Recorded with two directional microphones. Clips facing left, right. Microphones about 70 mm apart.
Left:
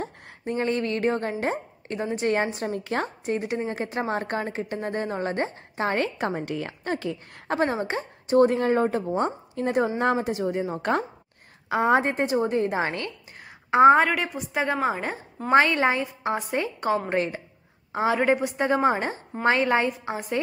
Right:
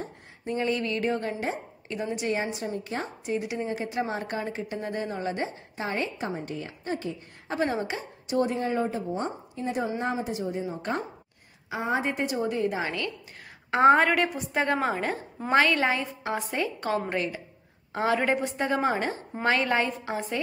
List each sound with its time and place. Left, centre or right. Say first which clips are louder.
0.5 s a woman's voice: left 2 dB; left
2.7 s a woman's voice: left 5 dB; left
3.3 s speech: right 1 dB; left
7.6 s a woman's voice: left 2 dB; left
10.8 s a woman's voice: left 6 dB; left
11.7 s a woman's voice: left 8 dB; left
12.0 s a woman's voice: left 4 dB; left
13.7 s a woman's voice: left 3 dB; centre
14.0 s a woman's voice: right 1 dB; centre
15.5 s a woman's voice: left 3 dB; left
17.9 s a woman's voice: left 3 dB; centre